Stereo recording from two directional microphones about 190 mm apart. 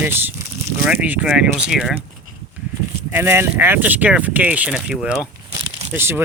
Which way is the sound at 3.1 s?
10° right (ahead or behind).